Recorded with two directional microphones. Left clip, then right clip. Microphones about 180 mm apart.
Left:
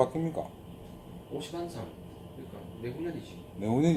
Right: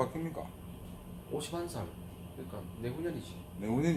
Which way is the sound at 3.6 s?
45° left (ahead or behind).